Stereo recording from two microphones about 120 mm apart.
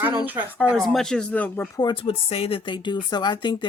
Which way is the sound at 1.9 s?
50° left (ahead or behind).